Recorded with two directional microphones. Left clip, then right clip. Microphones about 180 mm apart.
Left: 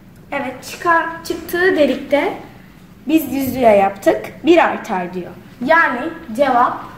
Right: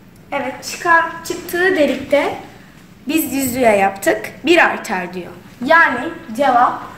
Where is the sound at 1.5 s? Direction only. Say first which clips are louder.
Even; 40° left (ahead or behind).